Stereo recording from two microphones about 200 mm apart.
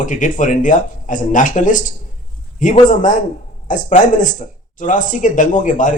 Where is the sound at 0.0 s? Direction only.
40° left (ahead or behind).